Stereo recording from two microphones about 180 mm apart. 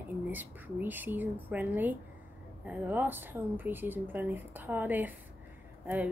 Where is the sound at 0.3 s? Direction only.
10° right (ahead or behind).